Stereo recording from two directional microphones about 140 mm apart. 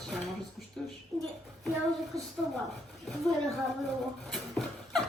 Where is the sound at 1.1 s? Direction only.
25° right (ahead or behind).